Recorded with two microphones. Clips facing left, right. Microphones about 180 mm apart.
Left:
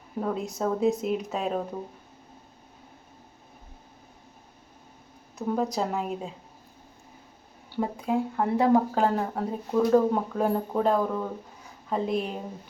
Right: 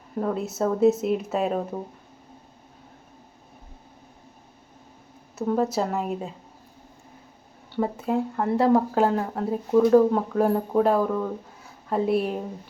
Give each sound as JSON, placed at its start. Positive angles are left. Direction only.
{"t": 0.2, "sound": "speech", "side_deg": 0}
{"t": 5.4, "sound": "speech", "side_deg": -5}
{"t": 7.7, "sound": "speech", "side_deg": 0}